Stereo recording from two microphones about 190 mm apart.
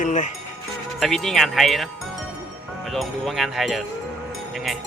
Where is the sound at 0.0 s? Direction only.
40° left (ahead or behind).